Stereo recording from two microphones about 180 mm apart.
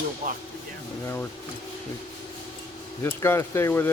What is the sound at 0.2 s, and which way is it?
Speech, 45° right (ahead or behind).